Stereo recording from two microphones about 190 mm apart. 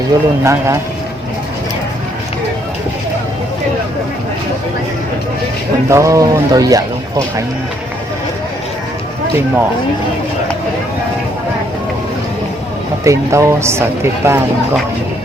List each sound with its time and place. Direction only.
0.1 s speech: 20° right (ahead or behind)
5.9 s speech: 15° right (ahead or behind)
13.1 s speech: 15° right (ahead or behind)